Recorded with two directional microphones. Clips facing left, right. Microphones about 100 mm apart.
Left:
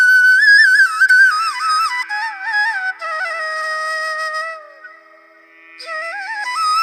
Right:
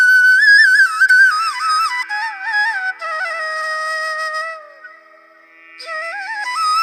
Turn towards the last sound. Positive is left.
turn(degrees=0)  # may be behind; listen again after turning